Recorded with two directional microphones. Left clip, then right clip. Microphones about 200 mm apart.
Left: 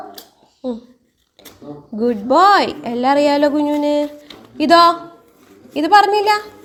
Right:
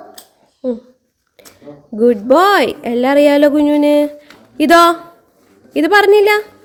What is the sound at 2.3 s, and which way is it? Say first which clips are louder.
A woman's voice: left 1 dB; 30° right (ahead or behind).